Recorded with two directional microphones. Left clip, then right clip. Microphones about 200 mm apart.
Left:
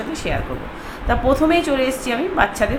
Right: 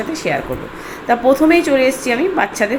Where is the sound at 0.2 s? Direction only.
15° right (ahead or behind).